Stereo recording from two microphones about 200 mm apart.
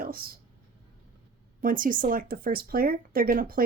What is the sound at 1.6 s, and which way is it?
Speech, 45° right (ahead or behind).